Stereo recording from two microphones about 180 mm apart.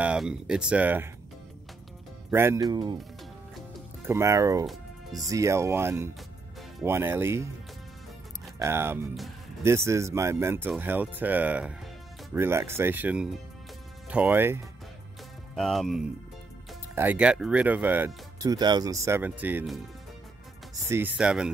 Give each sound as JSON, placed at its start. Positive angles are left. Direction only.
{"t": 0.0, "sound": "speech", "side_deg": -5}
{"t": 2.3, "sound": "speech", "side_deg": -15}
{"t": 4.0, "sound": "speech", "side_deg": -15}
{"t": 4.6, "sound": "music", "side_deg": 0}
{"t": 5.3, "sound": "speech", "side_deg": -15}
{"t": 8.5, "sound": "speech", "side_deg": -15}
{"t": 15.5, "sound": "speech", "side_deg": 0}
{"t": 16.9, "sound": "speech", "side_deg": -10}
{"t": 20.7, "sound": "speech", "side_deg": -10}